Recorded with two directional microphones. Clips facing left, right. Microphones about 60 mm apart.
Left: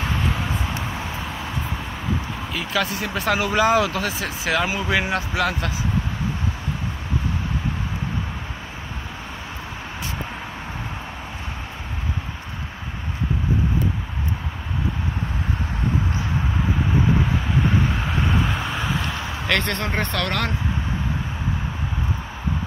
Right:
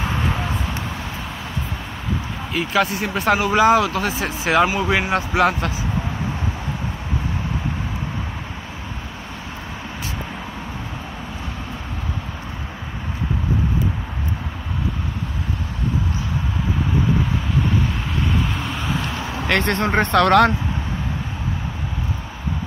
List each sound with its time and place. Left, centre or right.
0.0 s vehicle: centre
2.5 s speech: centre
4.0 s speech: right
5.3 s speech: right
18.4 s a sound: centre
19.4 s speech: right
20.1 s speech: right